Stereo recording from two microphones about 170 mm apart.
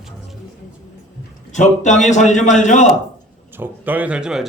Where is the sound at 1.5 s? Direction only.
45° left (ahead or behind).